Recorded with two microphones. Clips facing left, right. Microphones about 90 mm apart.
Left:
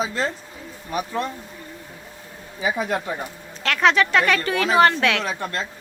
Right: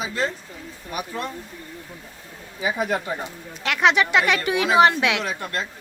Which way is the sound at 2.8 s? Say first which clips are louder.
Even; 15° right (ahead or behind).